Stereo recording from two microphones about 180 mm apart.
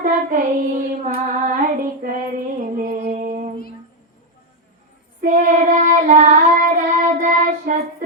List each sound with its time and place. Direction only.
0.0 s child singing: 45° right (ahead or behind)
1.0 s female singing: 45° right (ahead or behind)
5.2 s child singing: 45° right (ahead or behind)